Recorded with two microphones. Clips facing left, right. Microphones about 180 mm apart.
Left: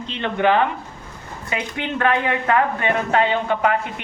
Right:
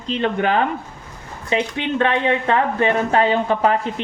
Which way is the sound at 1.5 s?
25° right (ahead or behind).